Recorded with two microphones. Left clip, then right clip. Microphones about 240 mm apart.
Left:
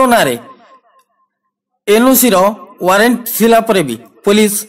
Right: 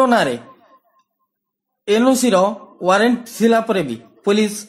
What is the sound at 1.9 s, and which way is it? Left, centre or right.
Speech, left.